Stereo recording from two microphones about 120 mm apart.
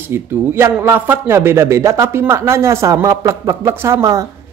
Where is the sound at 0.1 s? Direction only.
20° right (ahead or behind).